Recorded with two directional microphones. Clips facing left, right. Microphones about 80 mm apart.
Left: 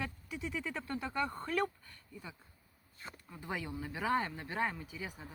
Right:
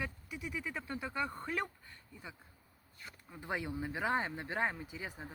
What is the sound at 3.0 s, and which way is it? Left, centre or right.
Speech, left.